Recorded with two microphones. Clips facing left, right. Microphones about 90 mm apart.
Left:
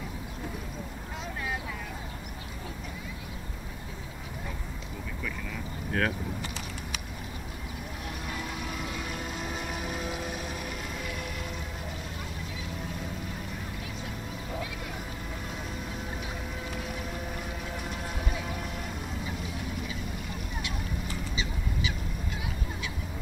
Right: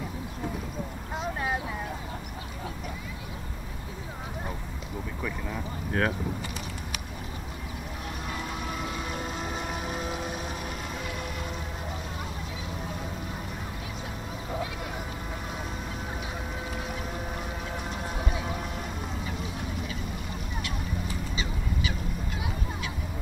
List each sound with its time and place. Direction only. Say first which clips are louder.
5.2 s vehicle: right 4 dB; 20° right (ahead or behind)
8.9 s vehicle: right 2 dB; 30° right (ahead or behind)
9.6 s boat: right 2 dB; 30° right (ahead or behind)
9.9 s a sound: right 2 dB; centre (ahead or behind)